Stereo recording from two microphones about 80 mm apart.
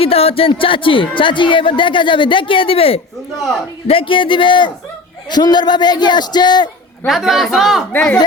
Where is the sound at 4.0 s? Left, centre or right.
Left.